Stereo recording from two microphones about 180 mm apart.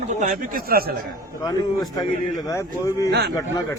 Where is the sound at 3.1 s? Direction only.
65° right (ahead or behind).